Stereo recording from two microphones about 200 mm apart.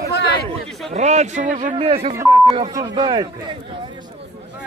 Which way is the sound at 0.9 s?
35° right (ahead or behind).